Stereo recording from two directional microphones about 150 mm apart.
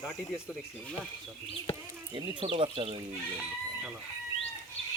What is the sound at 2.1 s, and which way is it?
Speech, 35° right (ahead or behind).